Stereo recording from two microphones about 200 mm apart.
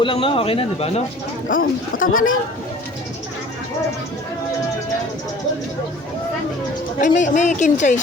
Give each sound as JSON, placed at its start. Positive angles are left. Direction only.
{"t": 0.0, "sound": "speech", "side_deg": 25}
{"t": 1.5, "sound": "speech", "side_deg": 45}
{"t": 7.0, "sound": "a woman's voice", "side_deg": 40}